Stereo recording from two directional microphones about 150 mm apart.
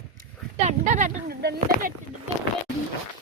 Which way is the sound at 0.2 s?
55° right (ahead or behind).